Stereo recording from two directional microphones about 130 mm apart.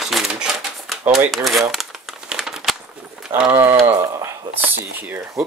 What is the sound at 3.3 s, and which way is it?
Speech, 10° right (ahead or behind).